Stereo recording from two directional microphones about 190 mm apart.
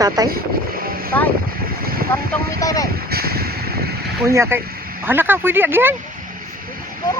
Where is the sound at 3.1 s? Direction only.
55° right (ahead or behind).